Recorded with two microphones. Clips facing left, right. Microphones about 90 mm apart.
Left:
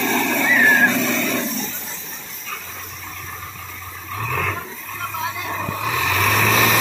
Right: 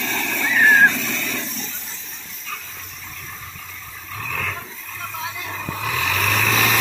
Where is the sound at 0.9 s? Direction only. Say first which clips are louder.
Left 2 dB; 55° left (ahead or behind).